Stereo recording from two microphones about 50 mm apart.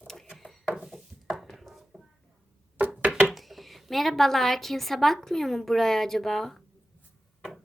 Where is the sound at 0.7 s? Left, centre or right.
Centre.